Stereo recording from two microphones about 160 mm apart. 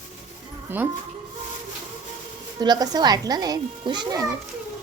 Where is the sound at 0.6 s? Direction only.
10° right (ahead or behind).